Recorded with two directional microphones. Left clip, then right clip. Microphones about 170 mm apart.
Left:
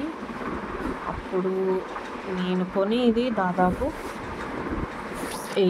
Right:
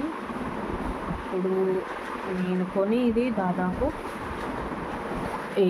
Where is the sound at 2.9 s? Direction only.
35° left (ahead or behind).